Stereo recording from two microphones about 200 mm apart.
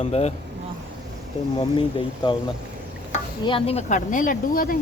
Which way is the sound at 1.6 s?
25° left (ahead or behind).